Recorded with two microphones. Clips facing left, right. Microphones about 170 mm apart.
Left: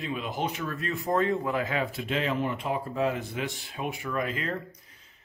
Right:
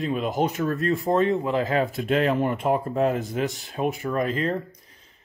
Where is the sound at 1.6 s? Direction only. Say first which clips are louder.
Right 6 dB; 40° right (ahead or behind).